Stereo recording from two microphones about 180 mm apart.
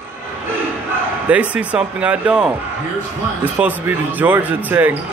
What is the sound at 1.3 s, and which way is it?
Speech, 10° right (ahead or behind).